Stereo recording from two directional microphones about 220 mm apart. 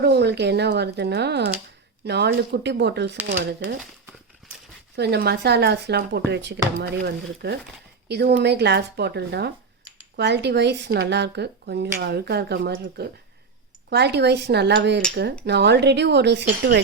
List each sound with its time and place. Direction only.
0.0 s speech: 50° right (ahead or behind)
4.9 s speech: 50° right (ahead or behind)